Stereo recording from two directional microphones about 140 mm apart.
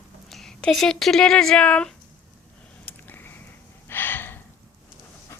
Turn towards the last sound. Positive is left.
turn(degrees=15)  # may be behind; listen again after turning